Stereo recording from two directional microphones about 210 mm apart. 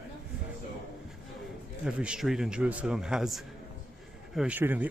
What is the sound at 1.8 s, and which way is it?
A man's voice, 5° right (ahead or behind).